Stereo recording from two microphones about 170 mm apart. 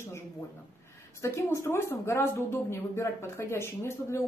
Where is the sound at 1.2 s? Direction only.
15° left (ahead or behind).